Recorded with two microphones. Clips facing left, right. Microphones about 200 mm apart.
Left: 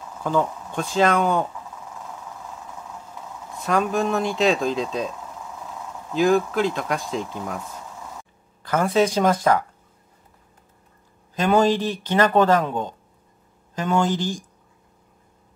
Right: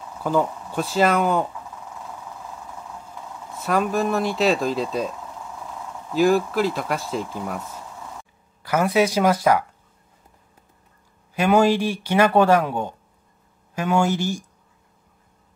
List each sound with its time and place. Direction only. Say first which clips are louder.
0.2 s speech: right 1 dB; 10° right (ahead or behind)
3.5 s speech: even; 5° right (ahead or behind)
6.1 s speech: right 1 dB; 5° right (ahead or behind)
11.3 s speech: right 1 dB; 10° right (ahead or behind)